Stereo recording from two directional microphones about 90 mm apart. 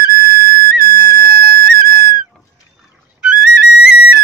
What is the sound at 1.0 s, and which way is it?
Flute, 45° left (ahead or behind).